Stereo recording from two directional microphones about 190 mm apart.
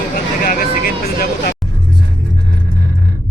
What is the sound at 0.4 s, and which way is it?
Vehicle, 50° left (ahead or behind).